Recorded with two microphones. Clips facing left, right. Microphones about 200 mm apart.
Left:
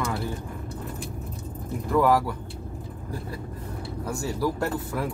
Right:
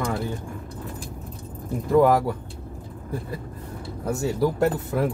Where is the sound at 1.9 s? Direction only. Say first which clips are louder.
Right 4 dB; 25° right (ahead or behind).